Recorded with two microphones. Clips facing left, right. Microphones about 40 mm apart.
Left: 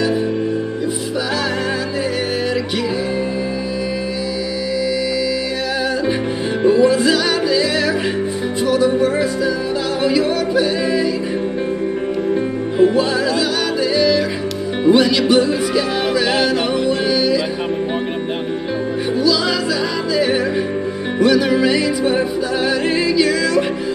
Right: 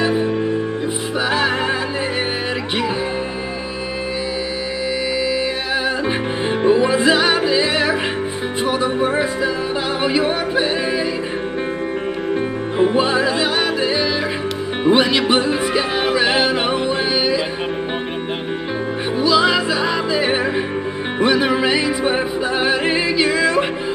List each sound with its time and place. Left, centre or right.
6.6 s music: right
8.6 s yodeling: right
12.7 s music: right
19.1 s music: right